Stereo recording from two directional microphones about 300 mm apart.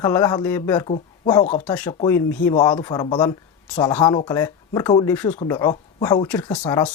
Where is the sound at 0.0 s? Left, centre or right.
Centre.